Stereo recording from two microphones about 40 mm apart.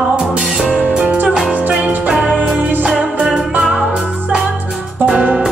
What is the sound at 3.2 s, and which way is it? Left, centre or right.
Music, centre.